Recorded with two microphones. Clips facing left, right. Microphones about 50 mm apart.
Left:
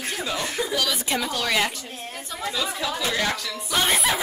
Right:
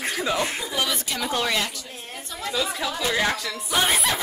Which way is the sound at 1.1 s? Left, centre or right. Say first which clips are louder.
Left 2 dB; left.